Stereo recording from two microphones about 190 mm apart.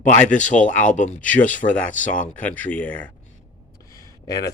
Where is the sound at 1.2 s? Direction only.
5° left (ahead or behind).